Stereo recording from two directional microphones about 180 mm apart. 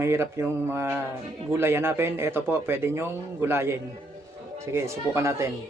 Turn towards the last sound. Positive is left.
turn(degrees=-15)  # may be behind; listen again after turning